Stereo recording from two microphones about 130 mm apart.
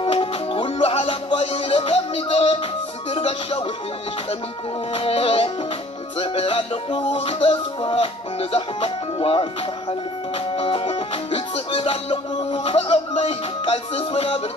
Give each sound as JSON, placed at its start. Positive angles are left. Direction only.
{"t": 0.0, "sound": "music", "side_deg": 45}
{"t": 4.9, "sound": "music", "side_deg": 45}